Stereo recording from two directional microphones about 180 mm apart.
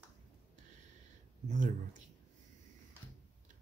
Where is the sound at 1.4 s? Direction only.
45° right (ahead or behind).